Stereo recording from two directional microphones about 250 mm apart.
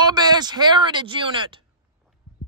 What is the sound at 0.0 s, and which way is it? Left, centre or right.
Speech, centre.